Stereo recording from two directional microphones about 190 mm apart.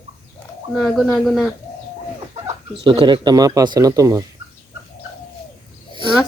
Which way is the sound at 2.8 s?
25° right (ahead or behind).